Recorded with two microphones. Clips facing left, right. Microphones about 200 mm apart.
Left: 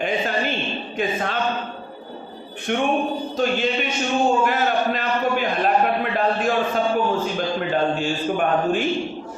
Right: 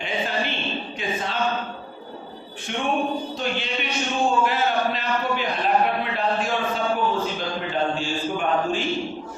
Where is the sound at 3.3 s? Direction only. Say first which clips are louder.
Left 6 dB; 45° left (ahead or behind).